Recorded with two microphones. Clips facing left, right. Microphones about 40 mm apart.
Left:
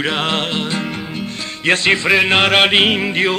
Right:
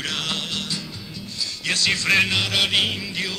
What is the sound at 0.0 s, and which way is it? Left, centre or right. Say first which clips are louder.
Music: left 9 dB; left.